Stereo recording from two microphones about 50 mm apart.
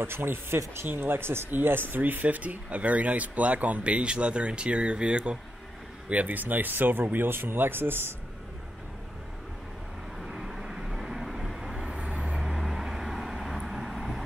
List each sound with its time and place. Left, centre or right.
0.0 s speech: right
6.0 s speech: right
10.2 s vehicle: centre
11.9 s vehicle: right
12.4 s vehicle: centre